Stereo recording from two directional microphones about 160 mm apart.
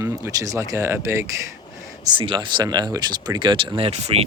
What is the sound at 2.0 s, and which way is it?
Speech, 30° right (ahead or behind).